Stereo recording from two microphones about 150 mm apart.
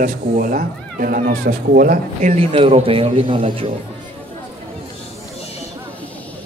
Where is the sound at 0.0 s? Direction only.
65° right (ahead or behind).